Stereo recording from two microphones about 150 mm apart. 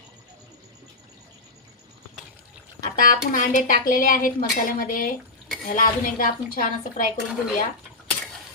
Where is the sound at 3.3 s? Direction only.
60° left (ahead or behind).